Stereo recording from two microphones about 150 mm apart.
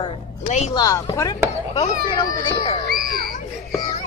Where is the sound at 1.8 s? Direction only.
35° left (ahead or behind).